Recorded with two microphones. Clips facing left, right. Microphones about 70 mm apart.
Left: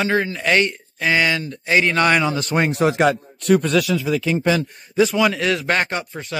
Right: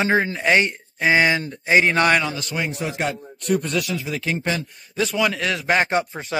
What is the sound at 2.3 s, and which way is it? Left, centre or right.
A man's voice, left.